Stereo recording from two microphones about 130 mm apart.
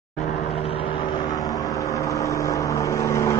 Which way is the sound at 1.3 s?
30° left (ahead or behind).